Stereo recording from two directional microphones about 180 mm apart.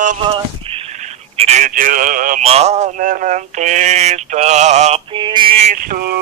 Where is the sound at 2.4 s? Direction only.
35° right (ahead or behind).